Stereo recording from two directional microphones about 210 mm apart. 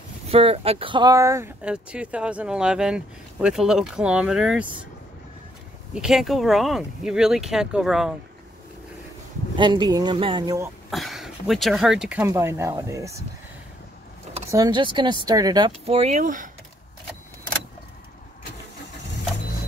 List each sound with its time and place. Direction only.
0.3 s speech: 25° right (ahead or behind); by 4.6 s 5° right (ahead or behind)
5.9 s speech: centre (ahead or behind)
9.6 s speech: 20° right (ahead or behind)
10.9 s speech: centre (ahead or behind)
14.5 s speech: 20° right (ahead or behind); by 16.4 s 40° right (ahead or behind)